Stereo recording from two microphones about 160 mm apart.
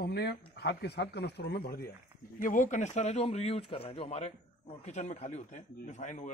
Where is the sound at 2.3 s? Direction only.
55° left (ahead or behind).